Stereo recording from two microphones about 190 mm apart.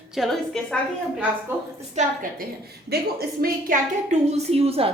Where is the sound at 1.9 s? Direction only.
45° right (ahead or behind).